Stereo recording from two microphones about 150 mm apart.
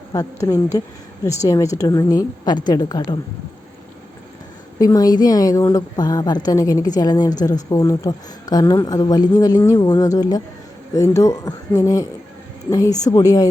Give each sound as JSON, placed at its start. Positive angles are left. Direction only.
{"t": 0.1, "sound": "a woman's voice", "side_deg": 20}
{"t": 4.8, "sound": "a woman's voice", "side_deg": 25}